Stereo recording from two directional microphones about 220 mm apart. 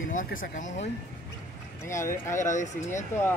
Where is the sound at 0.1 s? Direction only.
35° left (ahead or behind).